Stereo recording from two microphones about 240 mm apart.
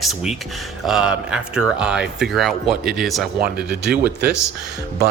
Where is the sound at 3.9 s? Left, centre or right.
Right.